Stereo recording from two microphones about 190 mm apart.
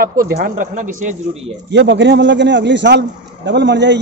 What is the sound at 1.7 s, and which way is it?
A man's voice, 70° right (ahead or behind).